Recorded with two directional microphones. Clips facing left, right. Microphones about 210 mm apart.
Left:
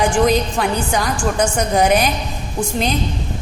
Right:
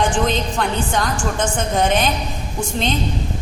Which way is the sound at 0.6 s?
Centre (ahead or behind).